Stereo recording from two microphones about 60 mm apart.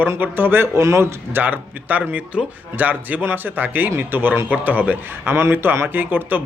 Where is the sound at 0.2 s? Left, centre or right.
Right.